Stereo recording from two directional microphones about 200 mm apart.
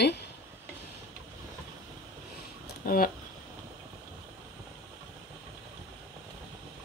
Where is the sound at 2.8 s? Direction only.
45° left (ahead or behind).